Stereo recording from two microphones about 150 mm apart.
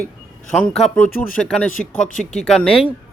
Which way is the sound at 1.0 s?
70° left (ahead or behind).